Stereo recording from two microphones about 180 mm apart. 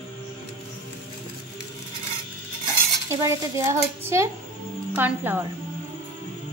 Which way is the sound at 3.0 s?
15° right (ahead or behind).